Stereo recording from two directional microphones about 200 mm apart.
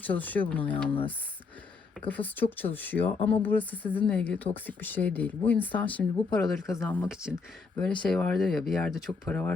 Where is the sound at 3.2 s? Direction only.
30° left (ahead or behind).